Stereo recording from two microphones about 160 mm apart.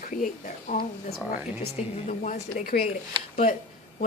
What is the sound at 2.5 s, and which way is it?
Speech, 65° left (ahead or behind).